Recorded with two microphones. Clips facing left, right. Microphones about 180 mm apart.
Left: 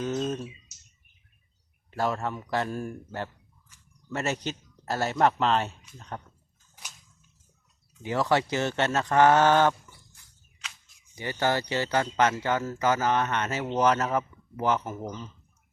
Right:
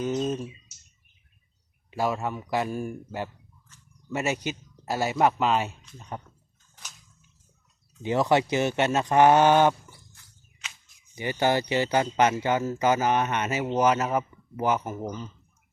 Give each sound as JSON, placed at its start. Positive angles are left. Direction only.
{"t": 0.0, "sound": "speech", "side_deg": -10}
{"t": 1.9, "sound": "speech", "side_deg": -10}
{"t": 8.0, "sound": "speech", "side_deg": -20}
{"t": 11.1, "sound": "speech", "side_deg": -15}